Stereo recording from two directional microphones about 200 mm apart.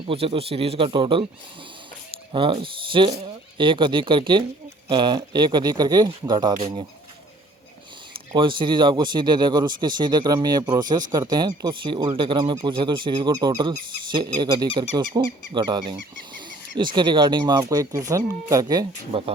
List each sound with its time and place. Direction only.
0.1 s speech: 30° right (ahead or behind)
2.3 s speech: 25° right (ahead or behind)
8.1 s speech: 25° right (ahead or behind)